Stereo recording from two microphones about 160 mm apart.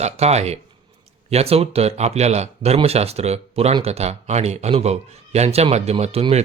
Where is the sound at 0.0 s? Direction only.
40° right (ahead or behind).